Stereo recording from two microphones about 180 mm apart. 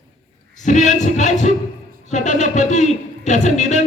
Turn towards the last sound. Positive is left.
turn(degrees=40)  # may be behind; listen again after turning